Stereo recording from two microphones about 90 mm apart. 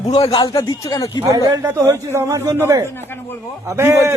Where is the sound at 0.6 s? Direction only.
45° left (ahead or behind).